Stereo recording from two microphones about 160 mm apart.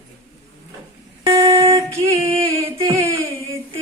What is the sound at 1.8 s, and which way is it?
Music, 20° right (ahead or behind).